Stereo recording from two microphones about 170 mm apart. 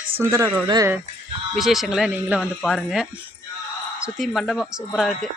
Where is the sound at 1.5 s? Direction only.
Centre (ahead or behind).